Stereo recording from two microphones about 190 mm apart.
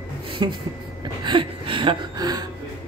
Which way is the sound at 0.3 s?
25° right (ahead or behind).